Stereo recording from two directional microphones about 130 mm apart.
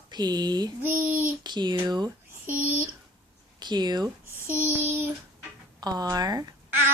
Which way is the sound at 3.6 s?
35° right (ahead or behind).